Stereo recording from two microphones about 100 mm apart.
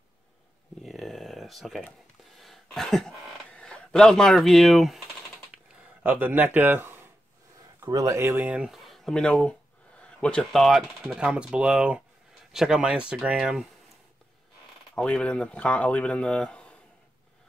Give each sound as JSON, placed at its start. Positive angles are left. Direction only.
{"t": 0.8, "sound": "a sound", "side_deg": 0}
{"t": 3.4, "sound": "speech", "side_deg": 10}
{"t": 6.0, "sound": "speech", "side_deg": -20}
{"t": 7.8, "sound": "speech", "side_deg": -35}
{"t": 11.1, "sound": "speech", "side_deg": -10}
{"t": 15.0, "sound": "speech", "side_deg": 10}